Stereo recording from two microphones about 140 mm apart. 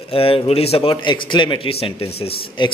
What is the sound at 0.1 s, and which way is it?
A man's voice, 40° left (ahead or behind).